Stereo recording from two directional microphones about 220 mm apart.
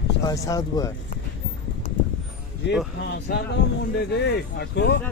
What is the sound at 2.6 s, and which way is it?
Speech, 50° left (ahead or behind).